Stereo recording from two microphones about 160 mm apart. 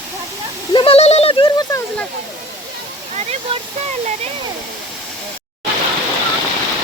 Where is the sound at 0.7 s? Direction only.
35° left (ahead or behind).